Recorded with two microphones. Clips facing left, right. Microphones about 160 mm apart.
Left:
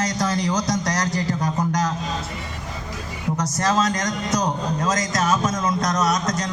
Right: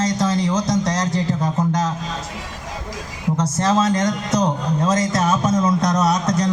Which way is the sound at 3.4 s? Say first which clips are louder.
Right 3 dB; 25° right (ahead or behind).